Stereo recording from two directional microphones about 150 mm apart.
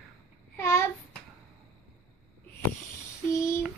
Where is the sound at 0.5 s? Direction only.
15° left (ahead or behind).